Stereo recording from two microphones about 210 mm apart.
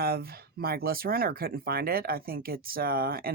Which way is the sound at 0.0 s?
45° right (ahead or behind).